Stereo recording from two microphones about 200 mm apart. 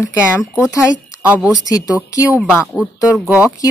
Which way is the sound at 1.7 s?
15° left (ahead or behind).